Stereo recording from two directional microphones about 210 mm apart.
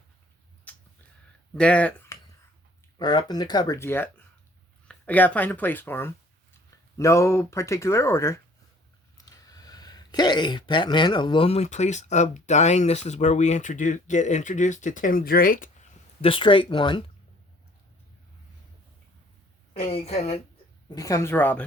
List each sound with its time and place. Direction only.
0.7 s a sound: 5° left (ahead or behind)
1.5 s speech: 5° left (ahead or behind)
3.0 s speech: 20° left (ahead or behind); by 15.9 s 40° left (ahead or behind)
16.2 s speech: 25° left (ahead or behind)
19.7 s speech: 30° left (ahead or behind)
20.9 s a woman's voice: 15° left (ahead or behind)